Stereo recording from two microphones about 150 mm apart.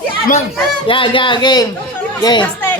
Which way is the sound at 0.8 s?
35° left (ahead or behind).